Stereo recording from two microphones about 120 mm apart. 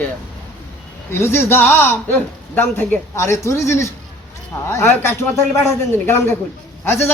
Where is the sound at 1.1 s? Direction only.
20° left (ahead or behind).